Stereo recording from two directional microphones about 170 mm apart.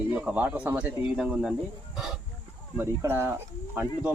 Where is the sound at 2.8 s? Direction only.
15° right (ahead or behind).